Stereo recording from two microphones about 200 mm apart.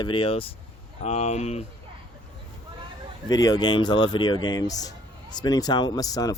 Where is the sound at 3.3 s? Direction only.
20° left (ahead or behind).